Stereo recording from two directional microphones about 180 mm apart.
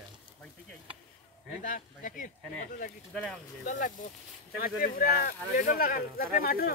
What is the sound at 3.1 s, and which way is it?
Speech, 5° left (ahead or behind).